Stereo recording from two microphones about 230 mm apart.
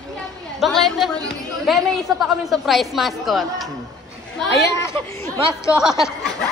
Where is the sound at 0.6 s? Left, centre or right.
Centre.